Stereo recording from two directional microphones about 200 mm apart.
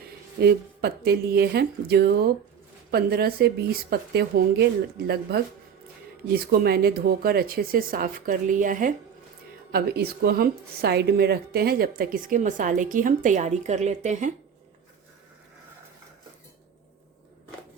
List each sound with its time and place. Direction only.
0.3 s a woman's voice: 55° right (ahead or behind); by 14.3 s 35° right (ahead or behind)